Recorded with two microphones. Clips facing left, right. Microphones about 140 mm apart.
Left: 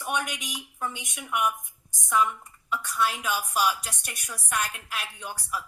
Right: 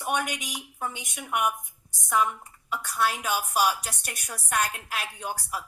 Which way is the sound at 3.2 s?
45° right (ahead or behind).